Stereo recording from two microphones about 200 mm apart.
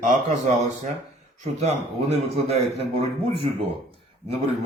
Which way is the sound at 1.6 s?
35° right (ahead or behind).